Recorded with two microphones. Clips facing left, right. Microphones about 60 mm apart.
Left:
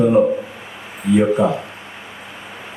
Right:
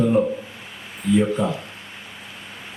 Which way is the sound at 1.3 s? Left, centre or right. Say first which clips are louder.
Left 6 dB; centre.